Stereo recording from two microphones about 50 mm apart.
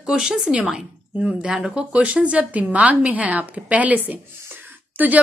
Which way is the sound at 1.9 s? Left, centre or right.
Right.